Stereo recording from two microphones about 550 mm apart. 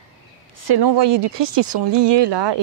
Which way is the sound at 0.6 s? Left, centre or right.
Right.